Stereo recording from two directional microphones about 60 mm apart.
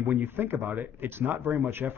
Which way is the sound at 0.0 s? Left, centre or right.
Right.